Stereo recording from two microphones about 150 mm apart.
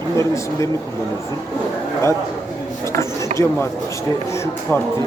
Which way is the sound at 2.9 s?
20° left (ahead or behind).